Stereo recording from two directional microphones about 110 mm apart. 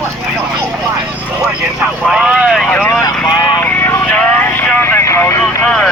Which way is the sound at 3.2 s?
40° left (ahead or behind).